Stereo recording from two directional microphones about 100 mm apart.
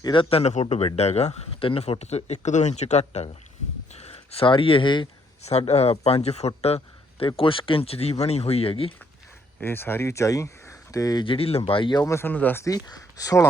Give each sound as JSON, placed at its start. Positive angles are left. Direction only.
{"t": 0.0, "sound": "speech", "side_deg": 55}
{"t": 5.5, "sound": "speech", "side_deg": 90}
{"t": 7.3, "sound": "speech", "side_deg": 60}
{"t": 9.6, "sound": "speech", "side_deg": 20}
{"t": 11.3, "sound": "speech", "side_deg": 75}
{"t": 11.9, "sound": "speech", "side_deg": 35}
{"t": 12.6, "sound": "speech", "side_deg": 40}